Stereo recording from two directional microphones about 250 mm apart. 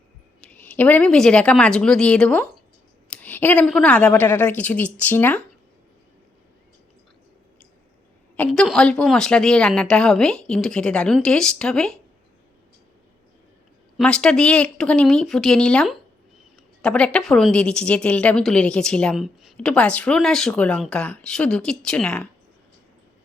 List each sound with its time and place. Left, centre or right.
0.4 s a woman's voice: centre
8.4 s a woman's voice: centre
13.9 s a woman's voice: centre